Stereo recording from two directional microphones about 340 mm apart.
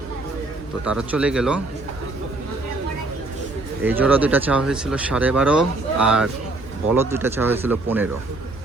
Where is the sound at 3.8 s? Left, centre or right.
Centre.